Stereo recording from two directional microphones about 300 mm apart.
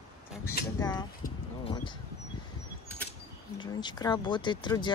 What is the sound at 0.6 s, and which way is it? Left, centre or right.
Speech, left.